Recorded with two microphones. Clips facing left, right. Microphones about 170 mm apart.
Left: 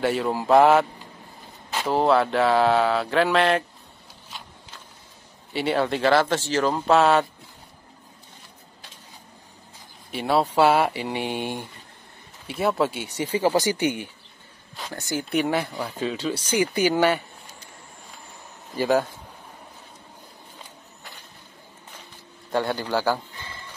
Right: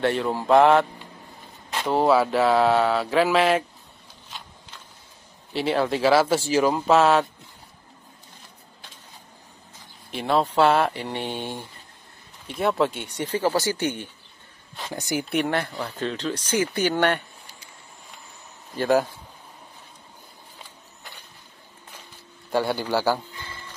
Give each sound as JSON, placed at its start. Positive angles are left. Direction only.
{"t": 0.0, "sound": "speech", "side_deg": 5}
{"t": 5.5, "sound": "speech", "side_deg": 0}
{"t": 10.1, "sound": "speech", "side_deg": 5}
{"t": 15.0, "sound": "a man's voice", "side_deg": -15}
{"t": 15.2, "sound": "speech", "side_deg": 0}
{"t": 18.8, "sound": "speech", "side_deg": 0}
{"t": 22.5, "sound": "a man's voice", "side_deg": -5}